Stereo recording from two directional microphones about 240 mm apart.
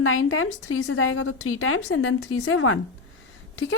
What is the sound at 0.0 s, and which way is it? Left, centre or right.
A woman's voice, left.